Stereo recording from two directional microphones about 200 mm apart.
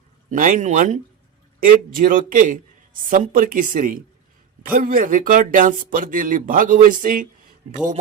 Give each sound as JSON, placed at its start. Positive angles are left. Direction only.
{"t": 0.3, "sound": "speech", "side_deg": -40}